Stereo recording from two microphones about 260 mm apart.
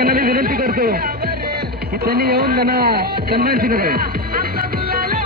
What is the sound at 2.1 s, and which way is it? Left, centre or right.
Speech, right.